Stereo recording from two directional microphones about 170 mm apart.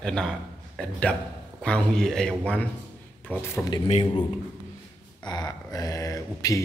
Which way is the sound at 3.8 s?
30° left (ahead or behind).